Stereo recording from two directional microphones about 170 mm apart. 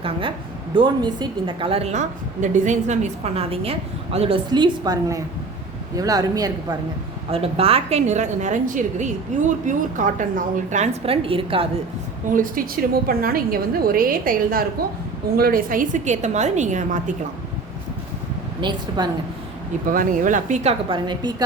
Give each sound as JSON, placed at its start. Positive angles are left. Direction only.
{"t": 0.0, "sound": "a woman's voice", "side_deg": -30}
{"t": 7.3, "sound": "a woman's voice", "side_deg": -35}
{"t": 12.3, "sound": "a woman's voice", "side_deg": -55}
{"t": 18.6, "sound": "a woman's voice", "side_deg": -25}
{"t": 19.9, "sound": "a woman's voice", "side_deg": -50}
{"t": 20.9, "sound": "a woman's voice", "side_deg": -25}